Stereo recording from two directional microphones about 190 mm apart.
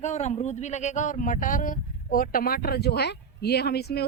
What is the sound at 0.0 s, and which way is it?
Speech, 40° left (ahead or behind).